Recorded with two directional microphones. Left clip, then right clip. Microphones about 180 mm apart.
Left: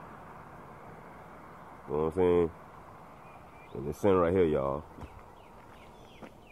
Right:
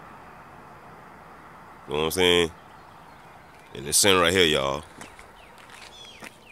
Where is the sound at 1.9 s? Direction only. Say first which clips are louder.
Right 6 dB; 20° right (ahead or behind).